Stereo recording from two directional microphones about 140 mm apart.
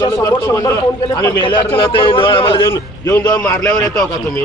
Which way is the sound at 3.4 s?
10° left (ahead or behind).